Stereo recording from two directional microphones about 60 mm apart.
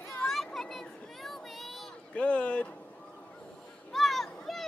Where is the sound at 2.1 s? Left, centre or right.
Centre.